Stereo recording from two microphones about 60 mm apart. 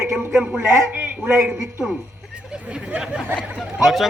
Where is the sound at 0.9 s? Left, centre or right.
Right.